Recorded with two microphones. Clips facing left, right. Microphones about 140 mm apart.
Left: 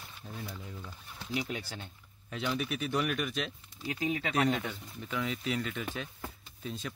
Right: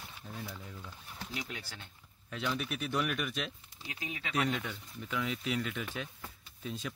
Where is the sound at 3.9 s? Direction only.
40° left (ahead or behind).